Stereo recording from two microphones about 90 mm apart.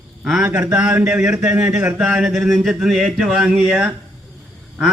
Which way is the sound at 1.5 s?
30° right (ahead or behind).